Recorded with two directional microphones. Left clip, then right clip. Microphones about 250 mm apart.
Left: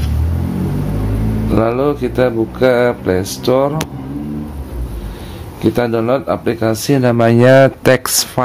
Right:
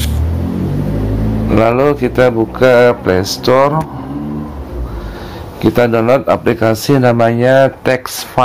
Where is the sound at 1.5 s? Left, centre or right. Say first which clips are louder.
Right 4 dB; centre.